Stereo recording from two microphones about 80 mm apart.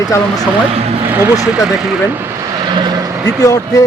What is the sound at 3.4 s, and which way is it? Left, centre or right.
Speech, left.